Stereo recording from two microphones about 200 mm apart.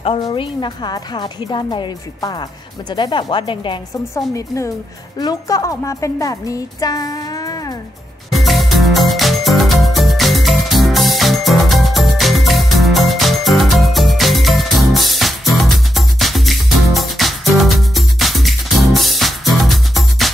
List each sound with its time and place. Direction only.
0.0 s a woman's voice: 25° left (ahead or behind)
8.3 s music: centre (ahead or behind)